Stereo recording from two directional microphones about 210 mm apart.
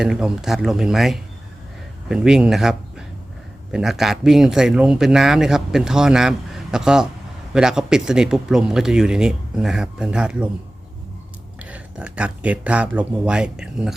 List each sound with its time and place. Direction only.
0.0 s speech: 5° right (ahead or behind)
11.6 s speech: 5° right (ahead or behind)